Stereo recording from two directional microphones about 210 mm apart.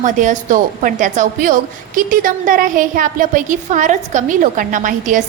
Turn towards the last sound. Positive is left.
turn(degrees=-35)  # may be behind; listen again after turning